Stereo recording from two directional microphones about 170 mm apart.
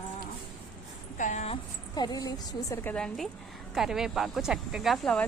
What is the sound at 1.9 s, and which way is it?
Speech, 25° left (ahead or behind).